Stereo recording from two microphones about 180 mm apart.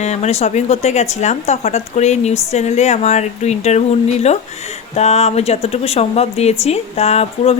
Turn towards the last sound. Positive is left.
turn(degrees=35)  # may be behind; listen again after turning